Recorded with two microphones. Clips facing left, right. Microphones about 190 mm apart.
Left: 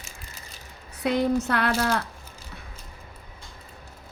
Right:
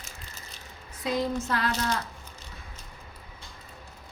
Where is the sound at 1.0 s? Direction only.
65° left (ahead or behind).